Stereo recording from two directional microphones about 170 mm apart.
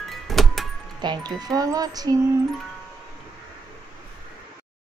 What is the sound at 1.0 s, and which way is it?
Speech, 25° right (ahead or behind).